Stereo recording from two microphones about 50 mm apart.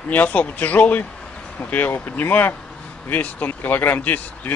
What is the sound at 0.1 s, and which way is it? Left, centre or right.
Speech, left.